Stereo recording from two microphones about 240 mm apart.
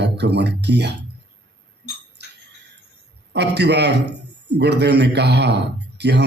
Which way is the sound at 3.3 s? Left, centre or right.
Right.